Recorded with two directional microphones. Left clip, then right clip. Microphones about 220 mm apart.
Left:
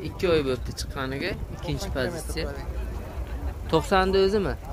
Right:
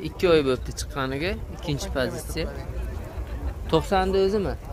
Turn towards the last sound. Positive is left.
turn(degrees=5)  # may be behind; listen again after turning